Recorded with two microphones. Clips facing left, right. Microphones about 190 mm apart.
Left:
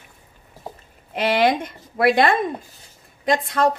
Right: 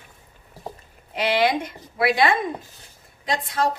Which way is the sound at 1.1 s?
50° left (ahead or behind).